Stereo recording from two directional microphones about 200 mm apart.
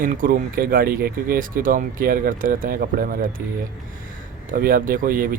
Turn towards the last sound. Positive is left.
turn(degrees=-45)  # may be behind; listen again after turning